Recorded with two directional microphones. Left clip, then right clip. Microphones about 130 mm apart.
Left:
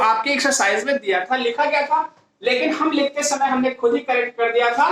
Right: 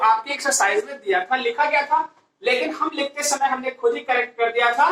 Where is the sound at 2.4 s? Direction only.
35° left (ahead or behind).